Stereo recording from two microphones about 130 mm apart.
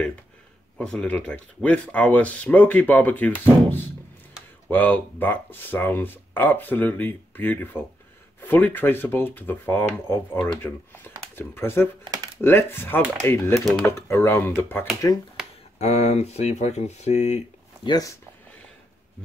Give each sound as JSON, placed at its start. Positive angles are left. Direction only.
{"t": 0.7, "sound": "speech", "side_deg": 5}
{"t": 12.0, "sound": "a sound", "side_deg": -30}
{"t": 12.4, "sound": "speech", "side_deg": 15}
{"t": 13.6, "sound": "speech", "side_deg": 0}
{"t": 13.8, "sound": "speech", "side_deg": 20}
{"t": 15.4, "sound": "a sound", "side_deg": -5}
{"t": 15.8, "sound": "speech", "side_deg": 60}
{"t": 17.8, "sound": "speech", "side_deg": 30}